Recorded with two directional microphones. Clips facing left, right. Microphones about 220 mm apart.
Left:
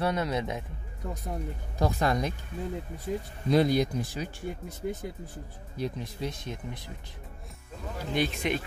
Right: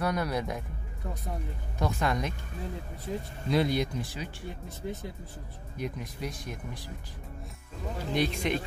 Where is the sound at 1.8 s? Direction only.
35° left (ahead or behind).